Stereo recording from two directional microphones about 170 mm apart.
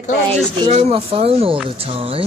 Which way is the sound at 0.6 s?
35° right (ahead or behind).